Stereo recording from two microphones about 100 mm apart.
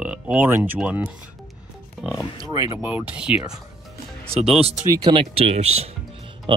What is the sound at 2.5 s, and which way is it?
Speech, 35° right (ahead or behind).